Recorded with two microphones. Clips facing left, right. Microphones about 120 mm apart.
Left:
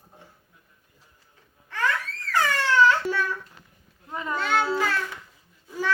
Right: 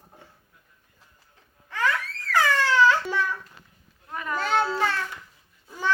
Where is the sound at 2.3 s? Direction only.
15° right (ahead or behind).